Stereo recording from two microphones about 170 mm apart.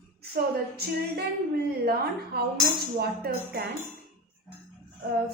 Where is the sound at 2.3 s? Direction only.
70° right (ahead or behind).